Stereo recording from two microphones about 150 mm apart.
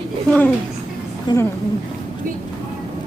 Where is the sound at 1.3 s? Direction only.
30° left (ahead or behind).